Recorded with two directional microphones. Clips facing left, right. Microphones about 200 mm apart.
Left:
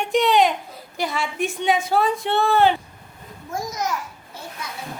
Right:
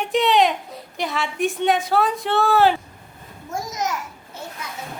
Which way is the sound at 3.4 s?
25° right (ahead or behind).